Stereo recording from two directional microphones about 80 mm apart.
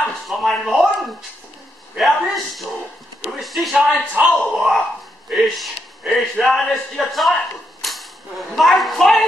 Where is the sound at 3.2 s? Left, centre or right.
Centre.